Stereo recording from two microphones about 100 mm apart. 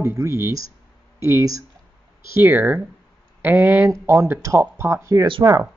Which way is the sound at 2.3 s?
20° right (ahead or behind).